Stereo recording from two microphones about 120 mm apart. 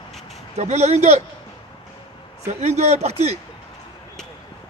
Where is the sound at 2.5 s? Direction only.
65° right (ahead or behind).